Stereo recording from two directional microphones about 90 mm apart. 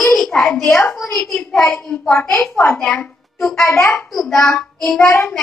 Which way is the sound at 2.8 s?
10° left (ahead or behind).